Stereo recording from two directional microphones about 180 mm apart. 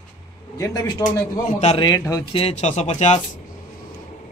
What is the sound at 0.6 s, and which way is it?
A man's voice, 20° left (ahead or behind).